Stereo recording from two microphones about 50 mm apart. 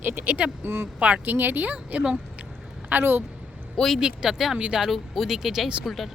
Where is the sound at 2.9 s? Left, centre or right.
Right.